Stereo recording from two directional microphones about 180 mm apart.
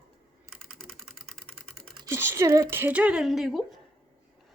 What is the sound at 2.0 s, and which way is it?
Speech, 15° right (ahead or behind).